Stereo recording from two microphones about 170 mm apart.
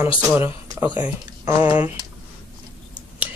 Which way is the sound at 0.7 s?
10° right (ahead or behind).